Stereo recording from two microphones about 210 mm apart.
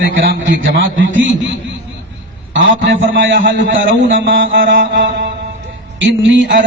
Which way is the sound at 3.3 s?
40° right (ahead or behind).